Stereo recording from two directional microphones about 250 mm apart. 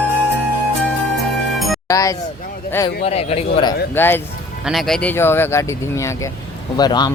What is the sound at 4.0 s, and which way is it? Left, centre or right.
Speech, centre.